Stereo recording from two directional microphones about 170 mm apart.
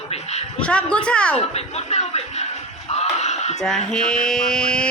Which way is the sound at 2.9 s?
40° left (ahead or behind).